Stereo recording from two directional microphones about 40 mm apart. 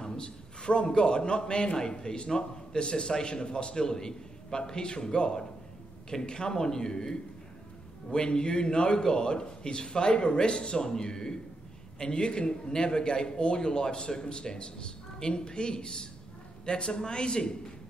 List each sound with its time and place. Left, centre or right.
0.0 s a man's voice: centre